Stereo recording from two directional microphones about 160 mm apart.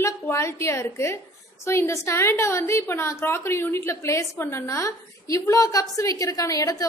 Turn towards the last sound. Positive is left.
turn(degrees=20)  # may be behind; listen again after turning